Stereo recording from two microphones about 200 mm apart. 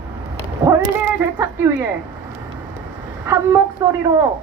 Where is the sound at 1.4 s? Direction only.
10° right (ahead or behind).